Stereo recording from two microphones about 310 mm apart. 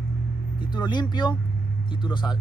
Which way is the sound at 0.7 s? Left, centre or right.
Centre.